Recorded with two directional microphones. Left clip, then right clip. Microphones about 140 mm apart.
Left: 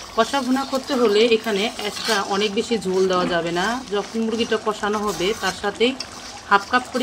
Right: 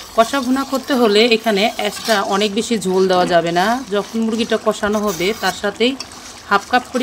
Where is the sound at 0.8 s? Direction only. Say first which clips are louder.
Right 4 dB; 50° right (ahead or behind).